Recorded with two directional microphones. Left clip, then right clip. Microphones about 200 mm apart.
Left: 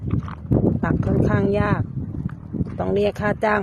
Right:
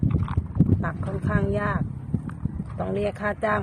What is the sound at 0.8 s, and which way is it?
Speech, 40° left (ahead or behind).